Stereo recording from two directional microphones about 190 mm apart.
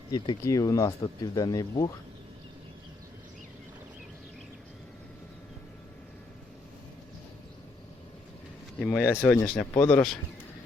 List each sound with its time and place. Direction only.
0.1 s speech: 20° left (ahead or behind)
8.8 s speech: 10° left (ahead or behind)